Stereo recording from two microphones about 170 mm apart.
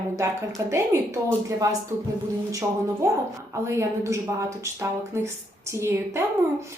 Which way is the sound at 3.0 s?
15° right (ahead or behind).